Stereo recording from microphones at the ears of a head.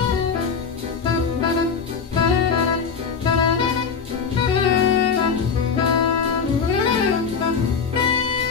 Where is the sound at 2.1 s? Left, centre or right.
Left.